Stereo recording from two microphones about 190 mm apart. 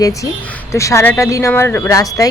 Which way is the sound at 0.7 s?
15° left (ahead or behind).